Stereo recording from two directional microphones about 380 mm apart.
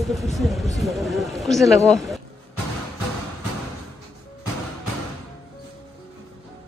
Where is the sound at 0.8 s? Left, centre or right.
Centre.